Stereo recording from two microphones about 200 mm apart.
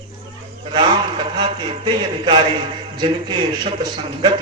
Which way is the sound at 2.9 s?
25° right (ahead or behind).